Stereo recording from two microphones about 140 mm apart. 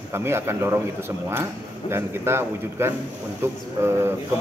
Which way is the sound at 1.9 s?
15° right (ahead or behind).